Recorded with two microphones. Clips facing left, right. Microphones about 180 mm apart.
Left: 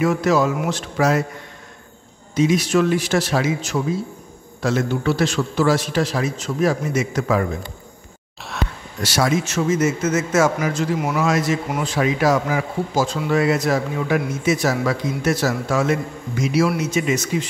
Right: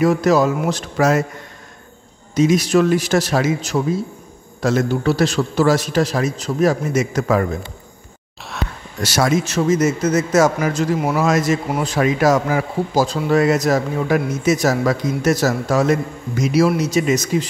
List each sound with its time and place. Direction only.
0.0 s a man's voice: 40° right (ahead or behind)
2.3 s a man's voice: 40° right (ahead or behind)
9.0 s a man's voice: 45° right (ahead or behind)